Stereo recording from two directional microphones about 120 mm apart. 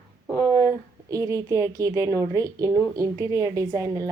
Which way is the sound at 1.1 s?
25° right (ahead or behind).